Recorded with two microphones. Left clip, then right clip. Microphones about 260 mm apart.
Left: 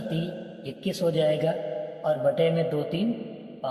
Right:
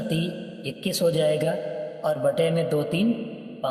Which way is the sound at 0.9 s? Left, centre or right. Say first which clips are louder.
Right 2 dB; right.